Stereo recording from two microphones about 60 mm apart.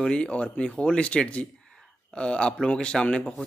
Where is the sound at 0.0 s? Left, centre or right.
Centre.